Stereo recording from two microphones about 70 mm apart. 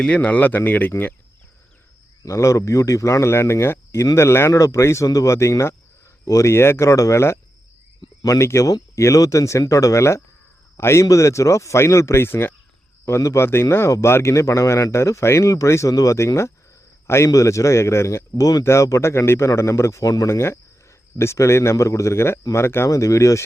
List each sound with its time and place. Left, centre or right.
0.0 s speech: centre
2.2 s a man's voice: left
20.3 s speech: left